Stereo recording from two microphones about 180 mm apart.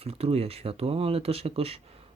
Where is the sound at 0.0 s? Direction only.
35° right (ahead or behind).